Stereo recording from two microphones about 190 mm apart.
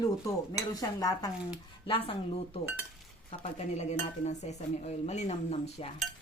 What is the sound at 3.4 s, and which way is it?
Dishes, 35° left (ahead or behind).